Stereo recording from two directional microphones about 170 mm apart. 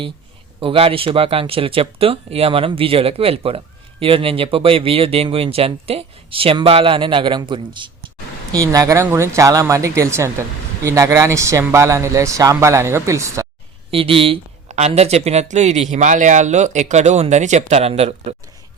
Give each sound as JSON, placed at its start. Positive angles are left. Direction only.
{"t": 0.6, "sound": "speech", "side_deg": -30}
{"t": 13.9, "sound": "speech", "side_deg": -30}